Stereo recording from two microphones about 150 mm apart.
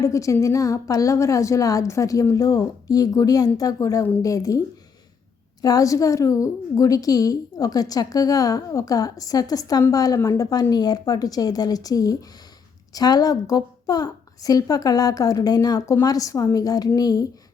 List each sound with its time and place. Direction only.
0.0 s a woman's voice: 20° left (ahead or behind)
5.6 s a woman's voice: 25° left (ahead or behind)